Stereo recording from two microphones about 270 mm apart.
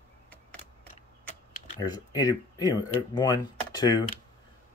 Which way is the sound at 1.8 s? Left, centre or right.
Centre.